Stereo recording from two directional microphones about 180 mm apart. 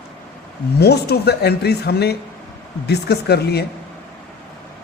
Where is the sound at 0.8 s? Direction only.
65° left (ahead or behind).